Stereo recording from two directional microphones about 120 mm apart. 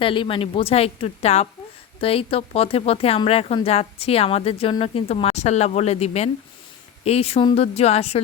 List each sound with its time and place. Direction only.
0.0 s a woman's voice: 45° left (ahead or behind)